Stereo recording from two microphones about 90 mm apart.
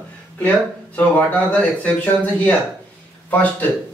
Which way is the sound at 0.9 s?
15° left (ahead or behind).